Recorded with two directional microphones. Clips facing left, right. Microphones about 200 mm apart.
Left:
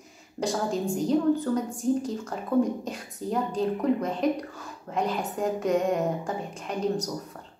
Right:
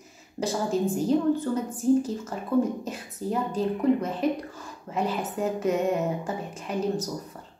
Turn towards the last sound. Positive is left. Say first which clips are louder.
# even
turn(degrees=-5)  # may be behind; listen again after turning